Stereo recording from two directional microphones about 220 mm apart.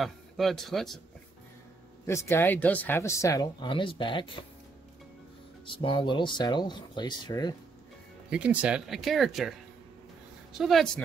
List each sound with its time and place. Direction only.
0.0 s a man's voice: centre (ahead or behind)
2.0 s speech: 10° left (ahead or behind)
5.8 s speech: 20° left (ahead or behind)
8.3 s speech: 5° right (ahead or behind)
10.6 s speech: centre (ahead or behind)